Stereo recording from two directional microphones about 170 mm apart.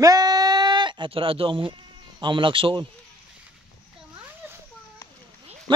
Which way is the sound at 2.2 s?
30° right (ahead or behind).